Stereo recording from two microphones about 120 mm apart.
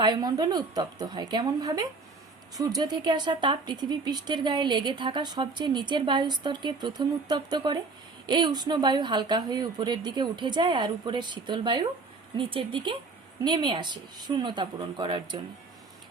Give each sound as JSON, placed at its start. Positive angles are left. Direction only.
{"t": 0.0, "sound": "speech", "side_deg": -35}